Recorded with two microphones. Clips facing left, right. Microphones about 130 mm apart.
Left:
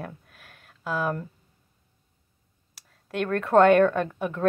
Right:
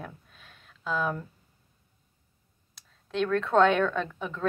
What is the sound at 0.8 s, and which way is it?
Speech, 5° left (ahead or behind).